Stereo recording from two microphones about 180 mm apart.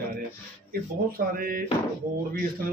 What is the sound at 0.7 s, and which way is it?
Speech, 55° right (ahead or behind).